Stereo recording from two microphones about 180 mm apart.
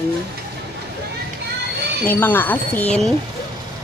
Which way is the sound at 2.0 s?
10° left (ahead or behind).